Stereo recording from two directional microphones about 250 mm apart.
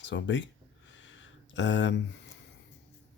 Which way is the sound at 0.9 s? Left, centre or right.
Left.